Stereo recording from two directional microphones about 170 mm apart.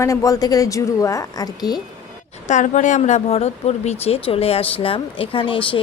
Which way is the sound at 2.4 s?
45° left (ahead or behind).